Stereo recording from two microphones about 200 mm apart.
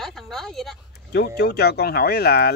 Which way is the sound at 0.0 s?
Centre (ahead or behind).